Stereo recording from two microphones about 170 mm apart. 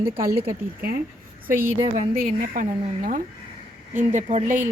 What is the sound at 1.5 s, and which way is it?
Speech, 15° right (ahead or behind).